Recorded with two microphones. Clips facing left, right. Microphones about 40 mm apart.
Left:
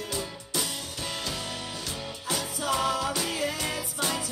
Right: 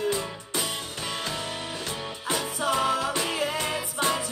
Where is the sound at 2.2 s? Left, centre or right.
Right.